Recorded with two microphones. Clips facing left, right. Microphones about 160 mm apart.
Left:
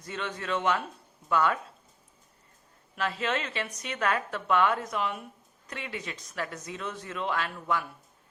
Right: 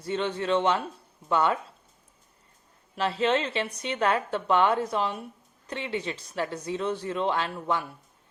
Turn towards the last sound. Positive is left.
turn(degrees=-30)  # may be behind; listen again after turning